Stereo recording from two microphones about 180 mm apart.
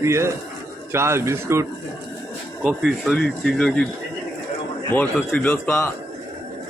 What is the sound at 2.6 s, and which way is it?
Speech, centre (ahead or behind).